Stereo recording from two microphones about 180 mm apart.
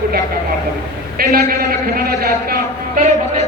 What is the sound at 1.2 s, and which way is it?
A man's voice, 55° right (ahead or behind).